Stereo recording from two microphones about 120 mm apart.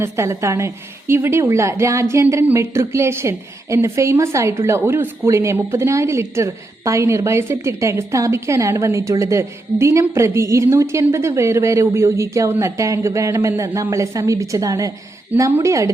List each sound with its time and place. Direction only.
0.0 s a woman's voice: 25° right (ahead or behind)